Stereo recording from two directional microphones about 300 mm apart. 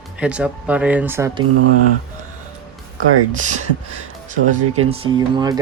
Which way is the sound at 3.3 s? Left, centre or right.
Right.